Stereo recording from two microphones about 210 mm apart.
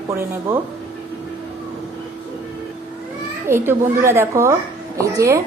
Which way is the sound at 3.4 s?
10° right (ahead or behind).